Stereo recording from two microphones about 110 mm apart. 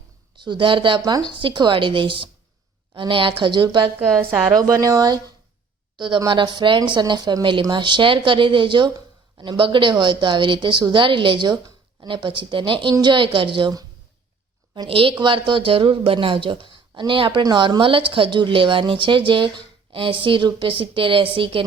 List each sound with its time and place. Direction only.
0.3 s a woman's voice: 45° right (ahead or behind)
4.5 s a woman's voice: 35° right (ahead or behind); by 13.7 s 50° right (ahead or behind)
14.8 s a woman's voice: 55° right (ahead or behind)